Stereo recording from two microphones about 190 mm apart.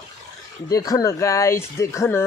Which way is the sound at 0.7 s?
20° left (ahead or behind).